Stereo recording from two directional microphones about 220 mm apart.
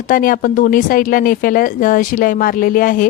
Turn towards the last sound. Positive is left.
turn(degrees=40)  # may be behind; listen again after turning